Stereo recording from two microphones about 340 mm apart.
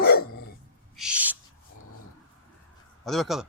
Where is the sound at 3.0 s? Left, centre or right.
Centre.